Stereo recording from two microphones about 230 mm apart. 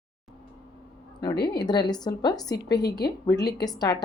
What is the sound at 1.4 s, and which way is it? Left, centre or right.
Speech, centre.